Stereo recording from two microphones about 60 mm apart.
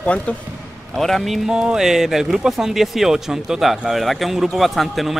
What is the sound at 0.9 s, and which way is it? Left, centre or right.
Speech, centre.